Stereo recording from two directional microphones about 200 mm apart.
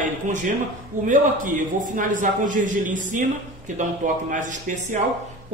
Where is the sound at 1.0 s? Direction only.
40° right (ahead or behind).